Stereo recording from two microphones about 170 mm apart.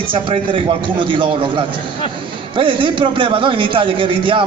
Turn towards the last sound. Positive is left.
turn(degrees=-30)  # may be behind; listen again after turning